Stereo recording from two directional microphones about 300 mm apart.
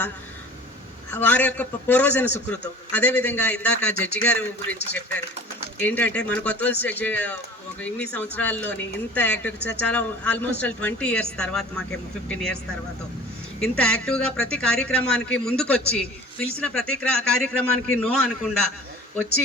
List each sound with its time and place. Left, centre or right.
1.1 s a man's voice: centre
5.8 s a man's voice: centre
13.6 s a man's voice: centre